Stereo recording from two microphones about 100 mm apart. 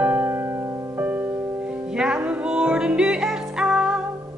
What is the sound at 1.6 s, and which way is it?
Music, 10° right (ahead or behind).